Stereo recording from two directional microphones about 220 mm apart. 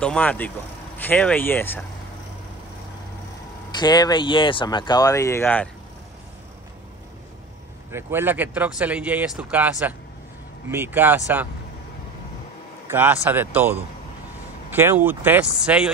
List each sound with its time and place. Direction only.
0.0 s speech: 5° left (ahead or behind)
3.7 s speech: 20° left (ahead or behind)
7.9 s speech: 10° right (ahead or behind)
12.8 s speech: 10° right (ahead or behind)